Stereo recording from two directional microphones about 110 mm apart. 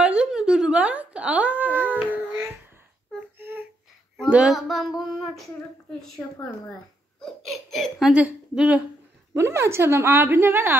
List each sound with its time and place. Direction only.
0.0 s a sound: 10° right (ahead or behind)
3.2 s child singing: 20° right (ahead or behind)
4.3 s female singing: 5° right (ahead or behind)
5.9 s a woman's voice: 5° left (ahead or behind)
7.2 s baby laughter: centre (ahead or behind)
8.1 s a woman's voice: 10° right (ahead or behind)
9.3 s a woman's voice: 25° right (ahead or behind)